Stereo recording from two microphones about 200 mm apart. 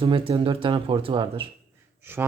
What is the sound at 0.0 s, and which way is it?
Speech, 25° right (ahead or behind).